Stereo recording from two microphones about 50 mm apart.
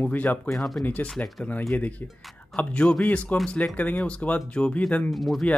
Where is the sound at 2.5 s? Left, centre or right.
Centre.